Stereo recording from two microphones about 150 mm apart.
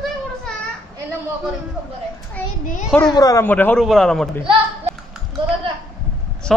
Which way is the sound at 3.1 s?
25° left (ahead or behind).